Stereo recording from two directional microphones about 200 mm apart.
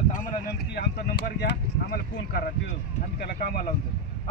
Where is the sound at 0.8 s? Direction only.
55° left (ahead or behind).